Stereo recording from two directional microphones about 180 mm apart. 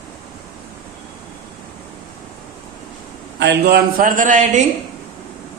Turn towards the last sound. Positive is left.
turn(degrees=-45)  # may be behind; listen again after turning